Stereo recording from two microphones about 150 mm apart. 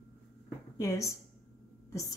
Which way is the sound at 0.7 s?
25° left (ahead or behind).